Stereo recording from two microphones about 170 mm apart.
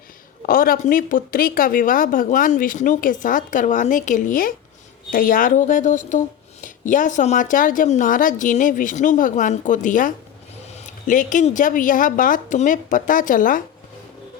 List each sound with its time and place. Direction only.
0.4 s speech: 55° left (ahead or behind)